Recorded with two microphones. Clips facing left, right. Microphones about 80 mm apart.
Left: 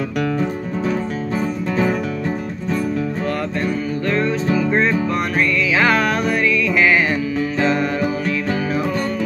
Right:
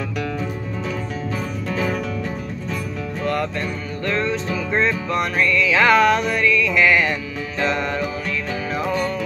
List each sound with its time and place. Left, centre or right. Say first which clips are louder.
1.7 s music: left 4 dB; left
3.3 s music: left 2 dB; centre